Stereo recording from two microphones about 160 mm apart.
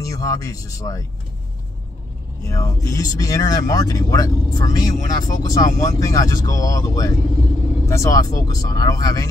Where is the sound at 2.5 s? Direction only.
20° left (ahead or behind).